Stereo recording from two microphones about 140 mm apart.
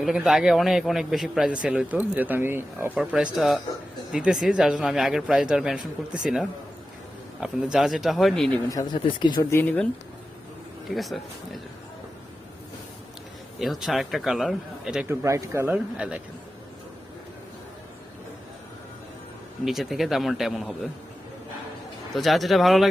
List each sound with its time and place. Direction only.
0.0 s a man's voice: centre (ahead or behind)
8.7 s speech: 25° left (ahead or behind)
9.5 s speech: 15° left (ahead or behind)
10.8 s a man's voice: centre (ahead or behind)
13.6 s a man's voice: centre (ahead or behind)
15.0 s speech: 20° right (ahead or behind)
19.6 s a man's voice: centre (ahead or behind)
22.1 s a man's voice: centre (ahead or behind)